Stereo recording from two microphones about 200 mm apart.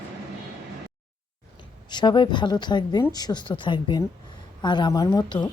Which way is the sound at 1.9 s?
20° left (ahead or behind).